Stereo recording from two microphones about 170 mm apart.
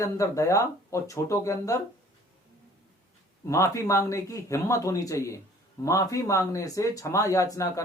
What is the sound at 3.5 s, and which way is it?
Speech, 20° left (ahead or behind).